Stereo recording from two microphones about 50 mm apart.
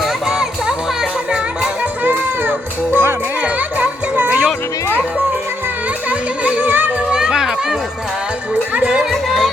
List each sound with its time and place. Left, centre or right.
0.0 s music: centre
1.3 s music: right
2.0 s music: right
3.4 s music: right
6.1 s music: right
6.7 s children playing: right
7.1 s music: centre
8.7 s music: right
9.0 s music: centre